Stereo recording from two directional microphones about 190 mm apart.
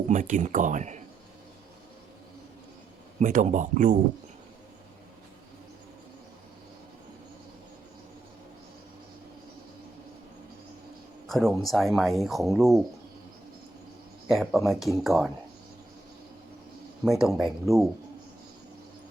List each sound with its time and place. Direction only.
0.1 s speech: 40° right (ahead or behind)
3.2 s speech: 40° right (ahead or behind)
11.3 s speech: centre (ahead or behind)
14.3 s speech: centre (ahead or behind)
17.1 s speech: 5° right (ahead or behind)